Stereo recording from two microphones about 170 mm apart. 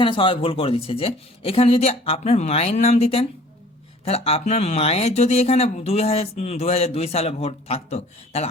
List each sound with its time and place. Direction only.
0.0 s speech: 30° left (ahead or behind)